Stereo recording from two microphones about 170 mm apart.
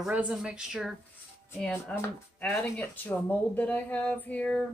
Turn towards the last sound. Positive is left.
turn(degrees=5)  # may be behind; listen again after turning